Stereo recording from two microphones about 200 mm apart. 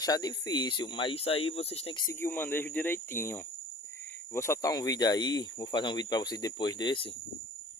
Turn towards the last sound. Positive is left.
turn(degrees=25)  # may be behind; listen again after turning